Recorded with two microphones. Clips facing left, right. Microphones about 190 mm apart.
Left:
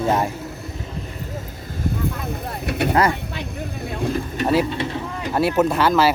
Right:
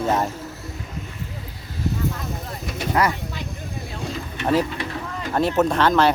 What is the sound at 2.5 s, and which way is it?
Vehicle, 65° left (ahead or behind).